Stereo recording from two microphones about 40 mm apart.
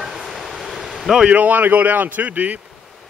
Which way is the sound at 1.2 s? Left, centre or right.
Right.